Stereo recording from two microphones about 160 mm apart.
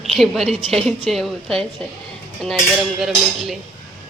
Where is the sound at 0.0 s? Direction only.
Centre (ahead or behind).